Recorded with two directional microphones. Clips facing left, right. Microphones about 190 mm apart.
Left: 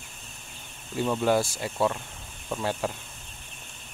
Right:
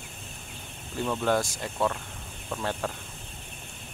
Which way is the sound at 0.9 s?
10° left (ahead or behind).